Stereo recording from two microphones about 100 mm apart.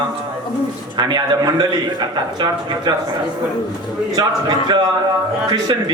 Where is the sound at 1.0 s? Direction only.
45° right (ahead or behind).